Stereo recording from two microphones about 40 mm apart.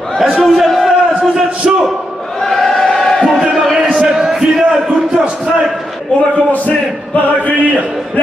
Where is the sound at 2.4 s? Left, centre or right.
Centre.